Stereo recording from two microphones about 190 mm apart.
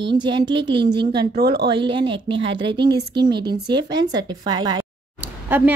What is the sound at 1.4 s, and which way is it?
Speech, 60° right (ahead or behind).